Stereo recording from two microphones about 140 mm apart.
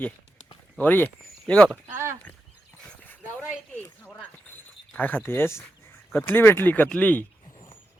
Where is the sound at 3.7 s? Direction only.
10° left (ahead or behind).